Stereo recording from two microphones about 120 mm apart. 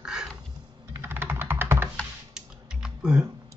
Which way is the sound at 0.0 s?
5° right (ahead or behind).